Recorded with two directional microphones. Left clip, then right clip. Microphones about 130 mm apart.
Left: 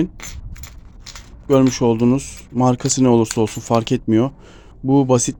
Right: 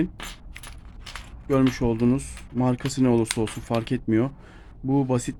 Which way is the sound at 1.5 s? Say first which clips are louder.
Left 8 dB; 20° left (ahead or behind).